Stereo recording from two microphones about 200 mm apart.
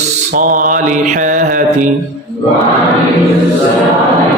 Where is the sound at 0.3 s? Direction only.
40° right (ahead or behind).